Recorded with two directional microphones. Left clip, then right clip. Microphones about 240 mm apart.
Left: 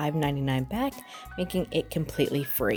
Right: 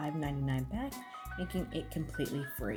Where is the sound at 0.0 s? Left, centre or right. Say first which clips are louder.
Left 9 dB; left.